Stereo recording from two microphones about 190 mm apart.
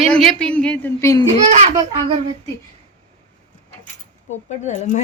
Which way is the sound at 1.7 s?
30° right (ahead or behind).